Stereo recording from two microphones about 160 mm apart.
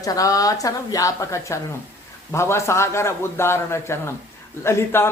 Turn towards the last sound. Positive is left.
turn(degrees=15)  # may be behind; listen again after turning